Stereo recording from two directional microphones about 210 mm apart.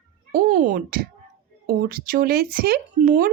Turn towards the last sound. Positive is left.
turn(degrees=-45)  # may be behind; listen again after turning